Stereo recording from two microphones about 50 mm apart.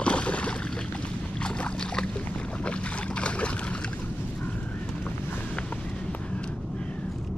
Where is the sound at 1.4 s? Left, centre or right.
Left.